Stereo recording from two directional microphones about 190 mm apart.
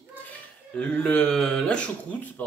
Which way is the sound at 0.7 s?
5° left (ahead or behind).